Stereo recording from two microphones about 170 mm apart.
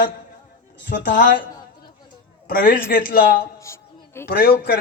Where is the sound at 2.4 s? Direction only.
55° left (ahead or behind).